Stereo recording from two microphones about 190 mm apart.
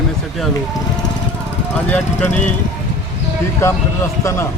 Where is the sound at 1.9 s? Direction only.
5° left (ahead or behind).